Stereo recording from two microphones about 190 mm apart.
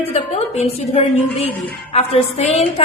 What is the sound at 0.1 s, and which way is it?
A woman's voice, 35° left (ahead or behind).